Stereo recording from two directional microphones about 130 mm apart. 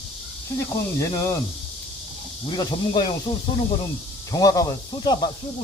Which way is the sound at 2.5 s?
35° left (ahead or behind).